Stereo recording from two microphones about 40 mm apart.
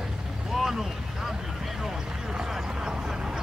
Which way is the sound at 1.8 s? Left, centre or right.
Centre.